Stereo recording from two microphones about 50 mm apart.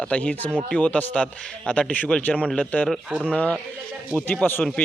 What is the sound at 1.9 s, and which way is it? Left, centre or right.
A man's voice, left.